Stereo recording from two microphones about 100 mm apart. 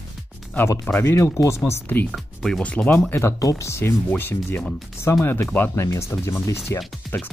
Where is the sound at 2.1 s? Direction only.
5° left (ahead or behind).